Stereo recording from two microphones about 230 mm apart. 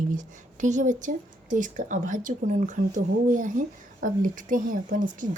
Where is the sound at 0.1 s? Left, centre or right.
Right.